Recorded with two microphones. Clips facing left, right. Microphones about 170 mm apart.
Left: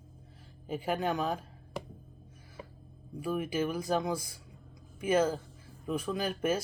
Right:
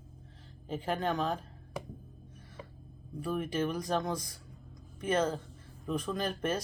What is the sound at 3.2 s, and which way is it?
Speech, 5° left (ahead or behind).